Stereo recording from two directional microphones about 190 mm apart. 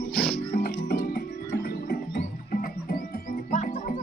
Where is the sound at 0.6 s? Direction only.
50° left (ahead or behind).